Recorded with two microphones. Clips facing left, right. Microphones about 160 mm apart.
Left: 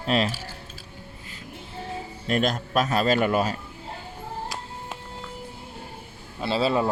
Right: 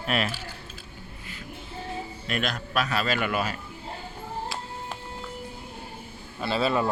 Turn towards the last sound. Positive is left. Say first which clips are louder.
# left 2 dB
turn(degrees=25)  # may be behind; listen again after turning